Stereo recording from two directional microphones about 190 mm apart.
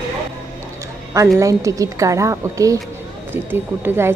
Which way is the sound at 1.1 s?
15° right (ahead or behind).